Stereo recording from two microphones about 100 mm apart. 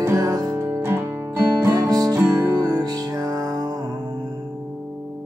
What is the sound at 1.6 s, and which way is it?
Music, 30° right (ahead or behind).